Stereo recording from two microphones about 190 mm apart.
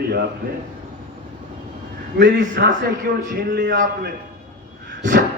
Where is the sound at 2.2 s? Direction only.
65° right (ahead or behind).